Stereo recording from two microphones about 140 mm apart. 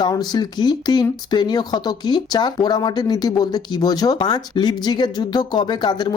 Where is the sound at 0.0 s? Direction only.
30° left (ahead or behind).